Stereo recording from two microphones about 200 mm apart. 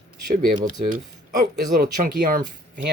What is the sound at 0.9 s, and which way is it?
Speech, 45° right (ahead or behind).